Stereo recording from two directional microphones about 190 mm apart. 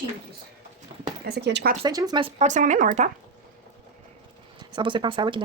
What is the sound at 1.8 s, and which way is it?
Speech, 20° right (ahead or behind).